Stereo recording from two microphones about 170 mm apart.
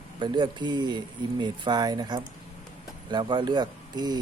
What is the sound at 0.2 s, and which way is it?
Speech, 25° right (ahead or behind).